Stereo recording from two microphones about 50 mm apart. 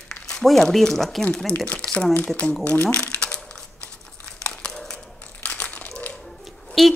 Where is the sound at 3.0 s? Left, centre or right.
Centre.